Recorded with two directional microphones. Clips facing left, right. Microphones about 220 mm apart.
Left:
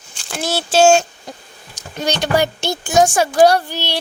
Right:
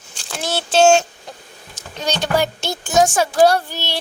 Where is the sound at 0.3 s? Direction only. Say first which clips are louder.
Left 2 dB; 5° left (ahead or behind).